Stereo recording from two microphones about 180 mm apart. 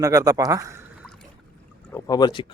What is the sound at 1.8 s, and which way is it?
Speech, 15° left (ahead or behind).